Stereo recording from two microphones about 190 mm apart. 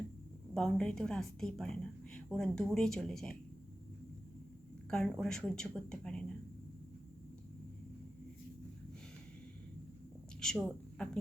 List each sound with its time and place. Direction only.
0.5 s speech: 5° left (ahead or behind)
4.9 s speech: 5° left (ahead or behind)
10.4 s a woman's voice: 5° left (ahead or behind)